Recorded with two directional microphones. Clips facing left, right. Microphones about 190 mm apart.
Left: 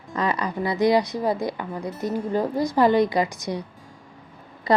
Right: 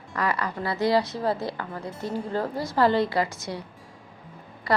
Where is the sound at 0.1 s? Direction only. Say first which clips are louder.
Left 3 dB; 20° left (ahead or behind).